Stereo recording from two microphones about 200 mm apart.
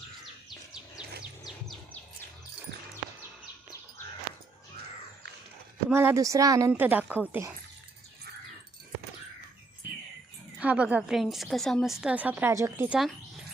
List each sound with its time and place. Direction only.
1.2 s bird: centre (ahead or behind)
5.9 s a woman's voice: 10° right (ahead or behind)
10.6 s a woman's voice: 5° right (ahead or behind)